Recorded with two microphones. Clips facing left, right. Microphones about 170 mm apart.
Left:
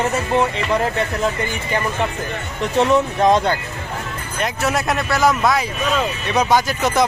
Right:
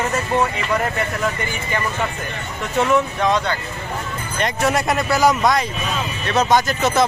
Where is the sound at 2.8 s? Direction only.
40° left (ahead or behind).